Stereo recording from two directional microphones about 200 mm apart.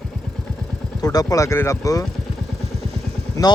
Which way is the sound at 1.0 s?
20° left (ahead or behind).